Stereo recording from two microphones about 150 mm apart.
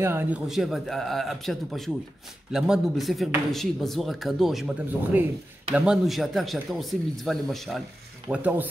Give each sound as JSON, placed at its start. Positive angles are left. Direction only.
{"t": 0.0, "sound": "speech", "side_deg": -15}
{"t": 0.5, "sound": "speech", "side_deg": 0}
{"t": 8.3, "sound": "speech", "side_deg": -10}